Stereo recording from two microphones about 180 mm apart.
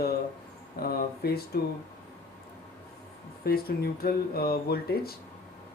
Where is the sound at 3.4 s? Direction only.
60° left (ahead or behind).